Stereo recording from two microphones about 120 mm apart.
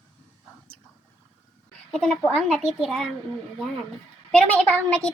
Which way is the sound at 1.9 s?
5° left (ahead or behind).